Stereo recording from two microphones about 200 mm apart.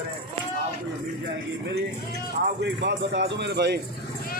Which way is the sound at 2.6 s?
60° right (ahead or behind).